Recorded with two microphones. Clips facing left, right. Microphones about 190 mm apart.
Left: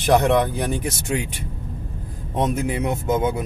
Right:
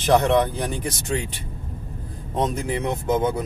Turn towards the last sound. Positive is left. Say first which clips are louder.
# left 1 dB
turn(degrees=10)  # may be behind; listen again after turning